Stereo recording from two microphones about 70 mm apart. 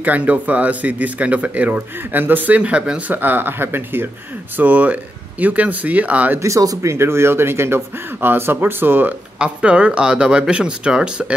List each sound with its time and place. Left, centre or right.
0.0 s speech: right
6.4 s speech: right
6.9 s a man's voice: right
9.4 s speech: centre